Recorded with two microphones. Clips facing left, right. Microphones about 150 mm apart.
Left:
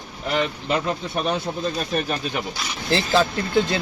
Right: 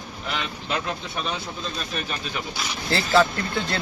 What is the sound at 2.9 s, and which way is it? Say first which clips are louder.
Speech: even; 20° left (ahead or behind).